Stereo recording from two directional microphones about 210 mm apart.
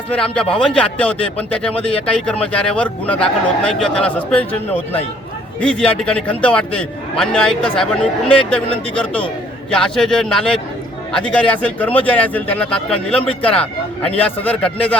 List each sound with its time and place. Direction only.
0.1 s a man's voice: 5° left (ahead or behind)